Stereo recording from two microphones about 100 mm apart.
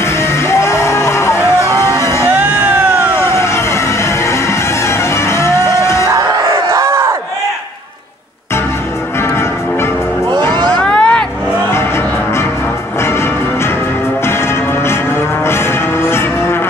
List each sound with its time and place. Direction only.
0.0 s music: 25° left (ahead or behind)
2.2 s music: 15° right (ahead or behind)
3.2 s music: 25° left (ahead or behind)
6.1 s crowd: 35° right (ahead or behind)
10.5 s a sound: 45° right (ahead or behind)
10.8 s vehicle: 10° left (ahead or behind)
15.4 s music: 25° left (ahead or behind)